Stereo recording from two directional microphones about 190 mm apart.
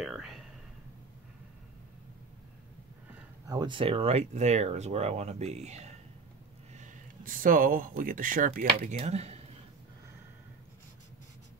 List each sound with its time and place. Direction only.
0.0 s whispering: centre (ahead or behind)
3.4 s speech: 20° right (ahead or behind)